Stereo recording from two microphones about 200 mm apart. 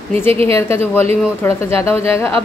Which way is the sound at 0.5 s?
10° left (ahead or behind).